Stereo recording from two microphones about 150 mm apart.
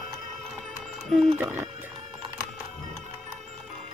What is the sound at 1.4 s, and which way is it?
Speech, 10° right (ahead or behind).